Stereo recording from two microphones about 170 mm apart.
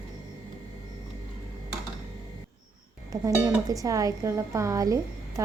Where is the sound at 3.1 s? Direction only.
20° right (ahead or behind).